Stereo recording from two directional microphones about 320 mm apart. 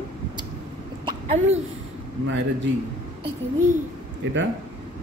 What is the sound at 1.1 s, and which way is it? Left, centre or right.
Speech, centre.